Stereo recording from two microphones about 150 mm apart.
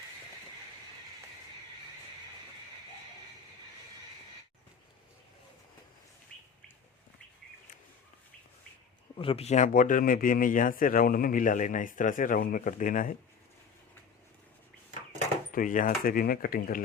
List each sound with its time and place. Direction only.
6.3 s bird: 10° left (ahead or behind)
9.1 s speech: 40° left (ahead or behind); by 13.1 s 60° left (ahead or behind)
15.5 s speech: 65° left (ahead or behind)